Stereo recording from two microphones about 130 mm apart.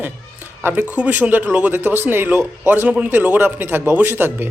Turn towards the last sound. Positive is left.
turn(degrees=-15)  # may be behind; listen again after turning